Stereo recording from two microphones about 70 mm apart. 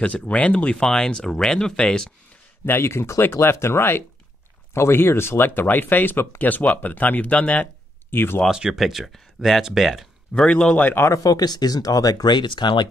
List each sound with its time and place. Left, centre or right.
0.0 s speech: centre
2.6 s speech: left
8.1 s speech: left
8.5 s speech: centre
10.5 s speech: centre
11.2 s speech: left